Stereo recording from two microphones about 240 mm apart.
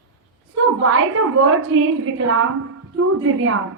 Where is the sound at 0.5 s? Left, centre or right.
Right.